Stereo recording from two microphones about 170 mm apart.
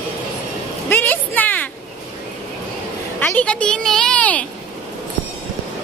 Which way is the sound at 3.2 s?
10° left (ahead or behind).